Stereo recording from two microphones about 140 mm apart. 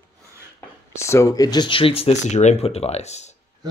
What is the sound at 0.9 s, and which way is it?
Speech, 20° left (ahead or behind).